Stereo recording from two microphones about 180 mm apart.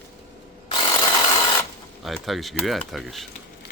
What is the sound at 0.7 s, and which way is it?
Ratchet, 25° left (ahead or behind).